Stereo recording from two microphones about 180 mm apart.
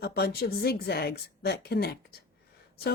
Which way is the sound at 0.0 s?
60° left (ahead or behind).